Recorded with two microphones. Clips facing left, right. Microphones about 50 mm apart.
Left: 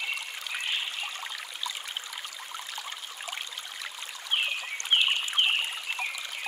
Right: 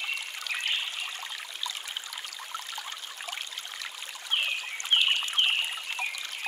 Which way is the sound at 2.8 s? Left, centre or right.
Centre.